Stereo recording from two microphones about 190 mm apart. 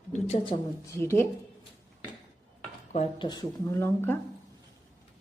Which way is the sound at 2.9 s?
35° left (ahead or behind).